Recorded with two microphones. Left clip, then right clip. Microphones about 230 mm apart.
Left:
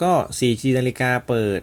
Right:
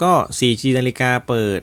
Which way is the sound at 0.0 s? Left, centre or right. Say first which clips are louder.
Right 3 dB; centre.